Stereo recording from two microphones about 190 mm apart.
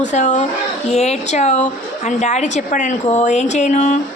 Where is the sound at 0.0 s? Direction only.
40° left (ahead or behind).